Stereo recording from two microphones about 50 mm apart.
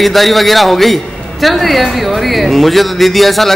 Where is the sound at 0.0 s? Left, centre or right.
Centre.